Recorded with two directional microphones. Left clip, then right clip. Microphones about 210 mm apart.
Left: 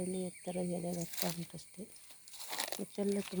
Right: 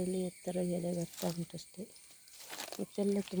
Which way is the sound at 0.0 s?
15° right (ahead or behind).